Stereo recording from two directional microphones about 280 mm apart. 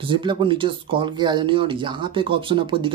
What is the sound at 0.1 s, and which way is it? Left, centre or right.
Speech, centre.